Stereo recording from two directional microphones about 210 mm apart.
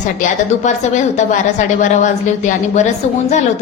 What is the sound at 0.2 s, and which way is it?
A woman's voice, 35° left (ahead or behind).